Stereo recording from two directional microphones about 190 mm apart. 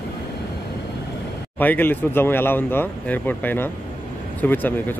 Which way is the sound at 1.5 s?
10° left (ahead or behind).